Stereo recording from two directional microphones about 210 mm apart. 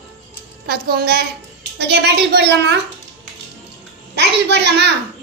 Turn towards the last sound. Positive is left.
turn(degrees=-55)  # may be behind; listen again after turning